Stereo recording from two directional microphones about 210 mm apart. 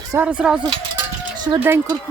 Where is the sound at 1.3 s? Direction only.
20° right (ahead or behind).